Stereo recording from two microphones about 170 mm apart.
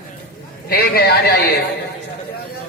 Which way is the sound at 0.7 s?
70° left (ahead or behind).